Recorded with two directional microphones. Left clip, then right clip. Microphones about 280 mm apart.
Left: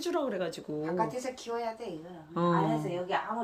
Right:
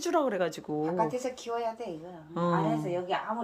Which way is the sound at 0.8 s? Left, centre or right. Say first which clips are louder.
Right 2 dB; right.